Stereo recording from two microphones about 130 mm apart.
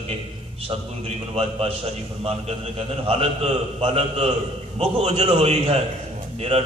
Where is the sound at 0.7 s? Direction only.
45° right (ahead or behind).